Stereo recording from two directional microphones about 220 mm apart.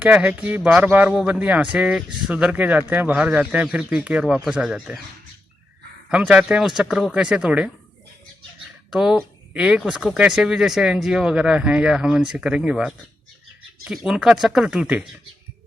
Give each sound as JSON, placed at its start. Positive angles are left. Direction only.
{"t": 0.0, "sound": "speech", "side_deg": -5}
{"t": 6.1, "sound": "speech", "side_deg": -5}
{"t": 8.9, "sound": "speech", "side_deg": 0}